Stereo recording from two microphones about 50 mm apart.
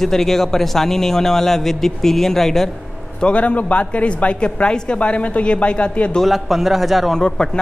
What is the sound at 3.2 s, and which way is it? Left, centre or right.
Speech, left.